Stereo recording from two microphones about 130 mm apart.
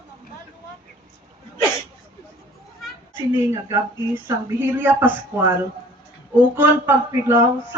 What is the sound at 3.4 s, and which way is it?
Speech, 15° right (ahead or behind).